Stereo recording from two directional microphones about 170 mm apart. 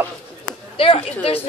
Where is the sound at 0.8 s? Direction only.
35° left (ahead or behind).